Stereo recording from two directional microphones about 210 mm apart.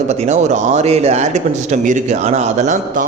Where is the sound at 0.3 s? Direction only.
35° right (ahead or behind).